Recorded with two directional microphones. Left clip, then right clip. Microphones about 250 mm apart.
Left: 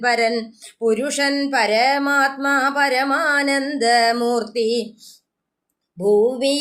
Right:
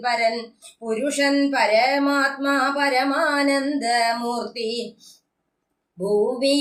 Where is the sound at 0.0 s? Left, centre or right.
Left.